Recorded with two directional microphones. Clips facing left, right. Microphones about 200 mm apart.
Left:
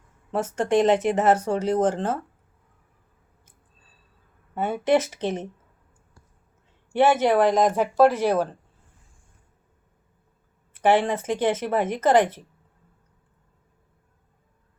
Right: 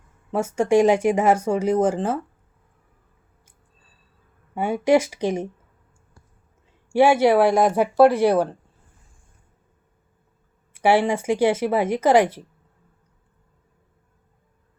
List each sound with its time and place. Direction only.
0.3 s speech: 10° right (ahead or behind)
4.5 s speech: 10° right (ahead or behind)
6.9 s speech: 10° right (ahead or behind)
10.8 s speech: 10° right (ahead or behind)